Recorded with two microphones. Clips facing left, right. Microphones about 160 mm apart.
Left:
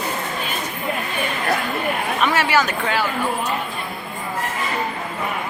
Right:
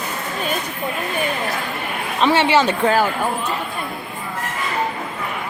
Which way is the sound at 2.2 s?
25° right (ahead or behind).